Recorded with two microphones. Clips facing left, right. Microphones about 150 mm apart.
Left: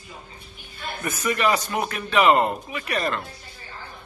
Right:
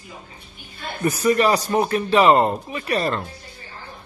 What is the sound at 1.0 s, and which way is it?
Speech, 35° right (ahead or behind).